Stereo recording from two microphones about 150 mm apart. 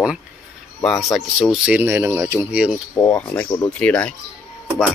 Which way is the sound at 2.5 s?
10° right (ahead or behind).